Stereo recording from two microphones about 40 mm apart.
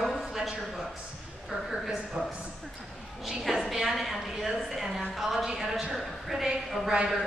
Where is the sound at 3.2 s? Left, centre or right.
Centre.